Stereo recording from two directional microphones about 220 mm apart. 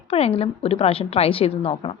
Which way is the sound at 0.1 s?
25° left (ahead or behind).